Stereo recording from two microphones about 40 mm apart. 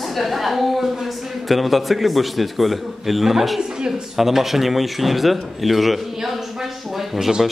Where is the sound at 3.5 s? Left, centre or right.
Centre.